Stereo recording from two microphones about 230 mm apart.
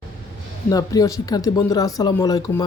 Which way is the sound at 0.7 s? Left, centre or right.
Centre.